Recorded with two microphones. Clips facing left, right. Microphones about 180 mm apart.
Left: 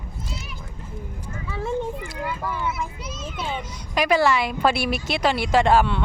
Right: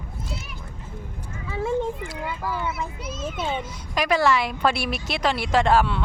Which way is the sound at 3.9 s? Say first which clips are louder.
Left 1 dB; centre (ahead or behind).